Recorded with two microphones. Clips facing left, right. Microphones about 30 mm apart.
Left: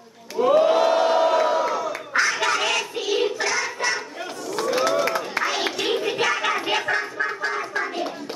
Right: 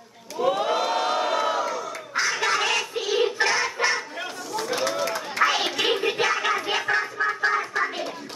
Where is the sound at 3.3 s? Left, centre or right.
Right.